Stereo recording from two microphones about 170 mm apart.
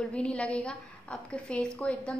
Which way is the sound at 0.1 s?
5° left (ahead or behind).